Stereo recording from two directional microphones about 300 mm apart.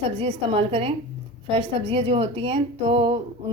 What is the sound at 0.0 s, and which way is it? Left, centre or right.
A woman's voice, centre.